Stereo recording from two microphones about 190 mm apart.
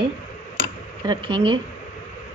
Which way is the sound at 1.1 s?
25° right (ahead or behind).